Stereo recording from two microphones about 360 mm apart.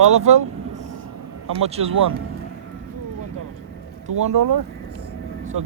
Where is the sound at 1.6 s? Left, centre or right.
Centre.